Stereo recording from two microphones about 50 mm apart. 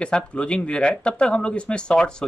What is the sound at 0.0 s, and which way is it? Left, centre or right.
Speech, left.